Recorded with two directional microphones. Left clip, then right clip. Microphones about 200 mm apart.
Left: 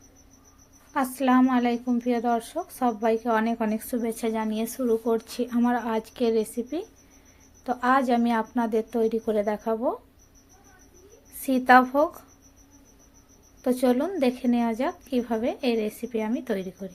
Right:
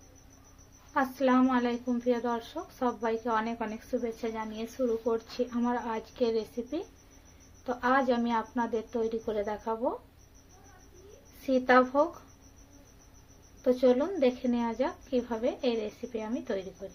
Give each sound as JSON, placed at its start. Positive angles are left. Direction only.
{"t": 0.9, "sound": "a woman's voice", "side_deg": 35}
{"t": 11.4, "sound": "a woman's voice", "side_deg": 35}
{"t": 13.7, "sound": "a woman's voice", "side_deg": 35}